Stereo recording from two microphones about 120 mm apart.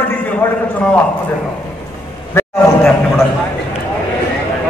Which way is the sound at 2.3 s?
20° left (ahead or behind).